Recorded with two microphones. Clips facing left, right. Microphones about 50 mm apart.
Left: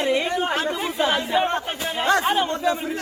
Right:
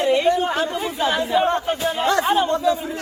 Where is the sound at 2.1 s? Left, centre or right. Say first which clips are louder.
Right 1 dB; left.